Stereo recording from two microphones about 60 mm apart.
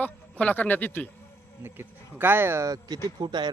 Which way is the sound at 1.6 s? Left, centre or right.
Right.